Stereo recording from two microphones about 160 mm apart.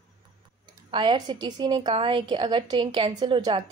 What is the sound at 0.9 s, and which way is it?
A woman's voice, 30° right (ahead or behind).